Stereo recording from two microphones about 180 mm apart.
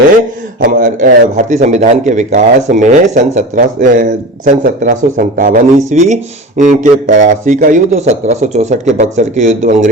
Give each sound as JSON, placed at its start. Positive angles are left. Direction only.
{"t": 0.6, "sound": "a man's voice", "side_deg": -50}